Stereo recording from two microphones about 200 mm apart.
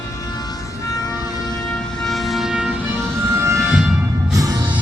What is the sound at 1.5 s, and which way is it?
Vehicle, centre (ahead or behind).